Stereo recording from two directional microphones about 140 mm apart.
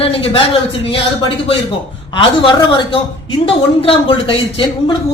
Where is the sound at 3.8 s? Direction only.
40° left (ahead or behind).